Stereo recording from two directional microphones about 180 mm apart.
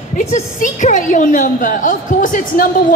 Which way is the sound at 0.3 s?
45° left (ahead or behind).